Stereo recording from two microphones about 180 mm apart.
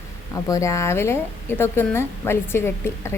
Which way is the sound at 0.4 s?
15° left (ahead or behind).